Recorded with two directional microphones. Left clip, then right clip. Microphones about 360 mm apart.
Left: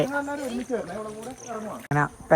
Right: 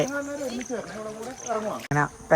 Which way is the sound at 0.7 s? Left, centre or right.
Left.